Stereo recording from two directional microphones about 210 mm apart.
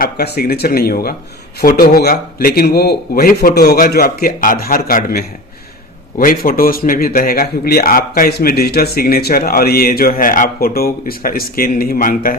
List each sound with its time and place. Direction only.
0.0 s a man's voice: 45° left (ahead or behind)